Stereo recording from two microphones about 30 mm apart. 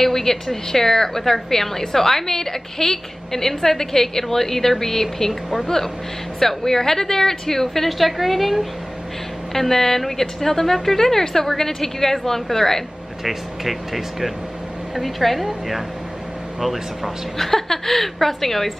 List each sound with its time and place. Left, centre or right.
0.0 s a woman's voice: centre
5.3 s speech: centre
6.4 s a woman's voice: centre
9.5 s a woman's voice: centre
13.2 s speech: centre
17.4 s a woman's voice: centre